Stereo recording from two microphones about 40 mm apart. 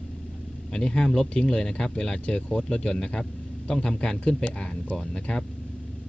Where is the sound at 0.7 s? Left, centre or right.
Centre.